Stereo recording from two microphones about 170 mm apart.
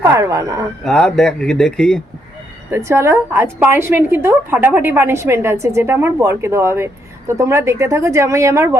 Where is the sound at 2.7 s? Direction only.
15° right (ahead or behind).